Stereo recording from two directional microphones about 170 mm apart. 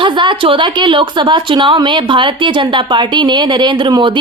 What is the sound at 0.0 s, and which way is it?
A woman's voice, 30° right (ahead or behind).